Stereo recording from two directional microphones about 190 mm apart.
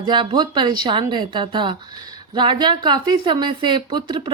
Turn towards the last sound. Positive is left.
turn(degrees=-25)  # may be behind; listen again after turning